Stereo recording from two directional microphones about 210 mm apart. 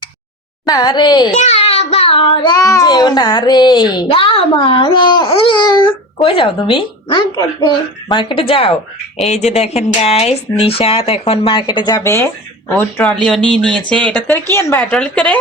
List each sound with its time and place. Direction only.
0.6 s speech: 20° left (ahead or behind)
1.3 s child singing: 35° left (ahead or behind)
8.1 s a woman's voice: 25° left (ahead or behind); by 15.4 s 5° left (ahead or behind)